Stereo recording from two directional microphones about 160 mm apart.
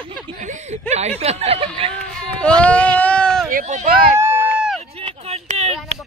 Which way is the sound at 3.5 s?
50° right (ahead or behind).